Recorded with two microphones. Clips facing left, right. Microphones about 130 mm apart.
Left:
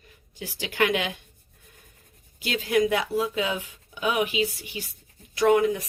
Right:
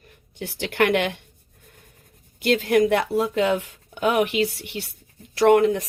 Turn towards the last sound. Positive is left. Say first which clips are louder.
# right 4 dB
turn(degrees=-65)  # may be behind; listen again after turning